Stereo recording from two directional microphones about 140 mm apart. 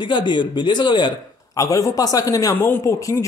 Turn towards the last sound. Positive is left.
turn(degrees=20)  # may be behind; listen again after turning